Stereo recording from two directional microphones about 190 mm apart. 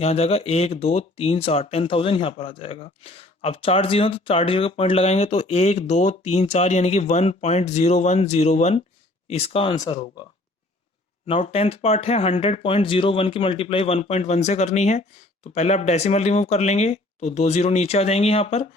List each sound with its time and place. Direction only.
0.0 s speech: 30° left (ahead or behind)
11.3 s speech: 35° left (ahead or behind)